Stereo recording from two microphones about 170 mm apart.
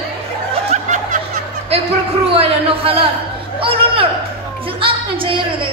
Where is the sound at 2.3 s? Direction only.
35° right (ahead or behind).